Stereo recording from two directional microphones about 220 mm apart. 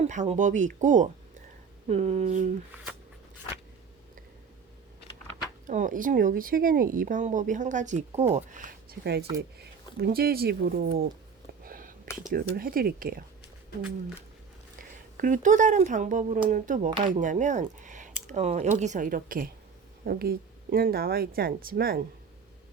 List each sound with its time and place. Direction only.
0.0 s speech: 30° right (ahead or behind)
5.6 s speech: 35° right (ahead or behind)
11.6 s whispering: 40° right (ahead or behind)
12.3 s speech: 40° right (ahead or behind)
15.2 s speech: 35° right (ahead or behind)